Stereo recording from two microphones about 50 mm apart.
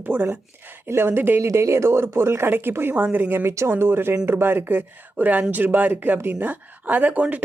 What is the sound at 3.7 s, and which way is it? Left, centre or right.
Speech, right.